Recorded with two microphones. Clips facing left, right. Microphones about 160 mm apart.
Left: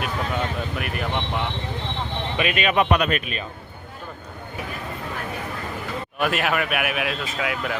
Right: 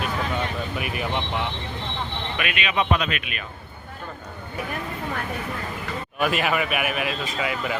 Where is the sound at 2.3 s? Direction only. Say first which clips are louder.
Left 6 dB; 30° left (ahead or behind).